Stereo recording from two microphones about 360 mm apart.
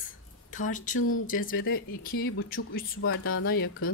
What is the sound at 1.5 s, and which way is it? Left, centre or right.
Speech, left.